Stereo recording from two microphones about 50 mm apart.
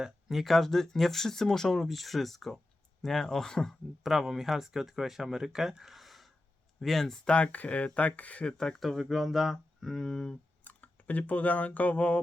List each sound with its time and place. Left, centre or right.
0.0 s speech: centre
4.0 s speech: centre
7.3 s speech: left
8.4 s speech: centre
10.6 s speech: left